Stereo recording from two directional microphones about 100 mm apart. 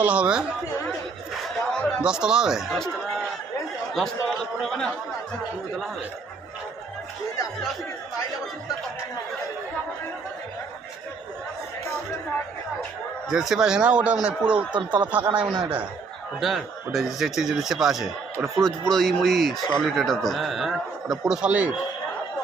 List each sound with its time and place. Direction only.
0.0 s a man's voice: 10° right (ahead or behind)
1.3 s a sound: 10° left (ahead or behind)
2.0 s a man's voice: 10° right (ahead or behind)
3.9 s speech: 5° left (ahead or behind)
13.3 s a man's voice: 5° right (ahead or behind)
16.4 s speech: centre (ahead or behind)